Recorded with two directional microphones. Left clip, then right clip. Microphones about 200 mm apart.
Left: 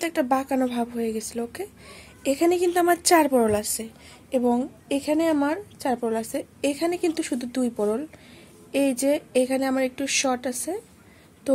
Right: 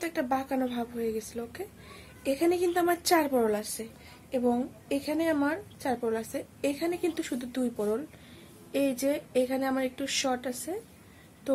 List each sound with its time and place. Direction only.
0.0 s a woman's voice: 50° left (ahead or behind)